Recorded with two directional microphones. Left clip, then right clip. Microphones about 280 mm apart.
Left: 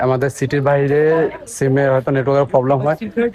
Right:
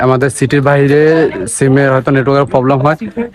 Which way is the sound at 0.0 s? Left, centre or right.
Centre.